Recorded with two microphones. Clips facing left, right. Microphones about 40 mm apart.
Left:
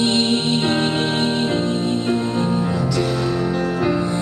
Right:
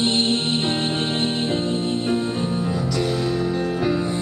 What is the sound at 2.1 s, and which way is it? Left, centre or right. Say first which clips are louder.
Music: left 3 dB; centre.